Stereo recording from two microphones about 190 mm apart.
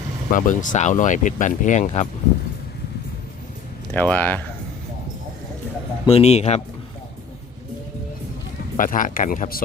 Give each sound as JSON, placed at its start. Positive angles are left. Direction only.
{"t": 0.3, "sound": "speech", "side_deg": 45}
{"t": 3.9, "sound": "speech", "side_deg": 10}
{"t": 6.1, "sound": "speech", "side_deg": 35}
{"t": 8.7, "sound": "speech", "side_deg": 45}